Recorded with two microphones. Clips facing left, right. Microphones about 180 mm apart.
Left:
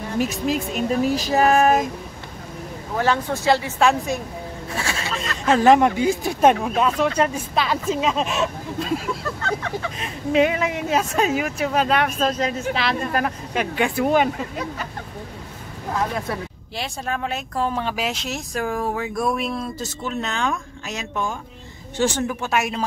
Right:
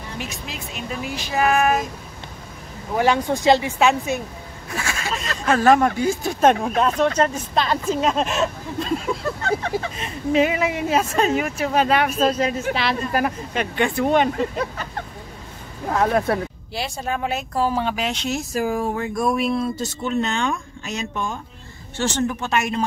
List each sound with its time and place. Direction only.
0.2 s speech: 45° left (ahead or behind)
3.0 s speech: 15° right (ahead or behind)
3.8 s speech: centre (ahead or behind)
4.7 s speech: 30° left (ahead or behind); by 14.3 s 5° left (ahead or behind)
16.1 s speech: 65° right (ahead or behind)
16.7 s speech: centre (ahead or behind)